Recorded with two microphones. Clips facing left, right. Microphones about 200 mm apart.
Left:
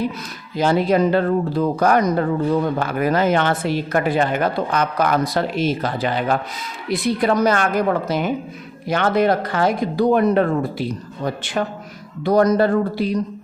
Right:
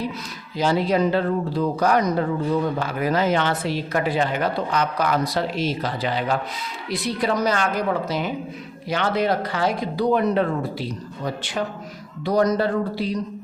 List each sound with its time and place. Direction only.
0.5 s speech: 55° left (ahead or behind)
12.2 s speech: 50° left (ahead or behind)